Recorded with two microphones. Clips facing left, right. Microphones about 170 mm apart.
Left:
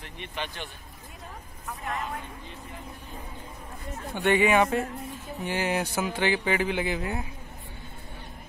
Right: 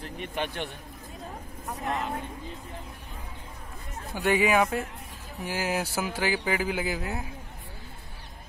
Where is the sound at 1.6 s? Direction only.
40° right (ahead or behind).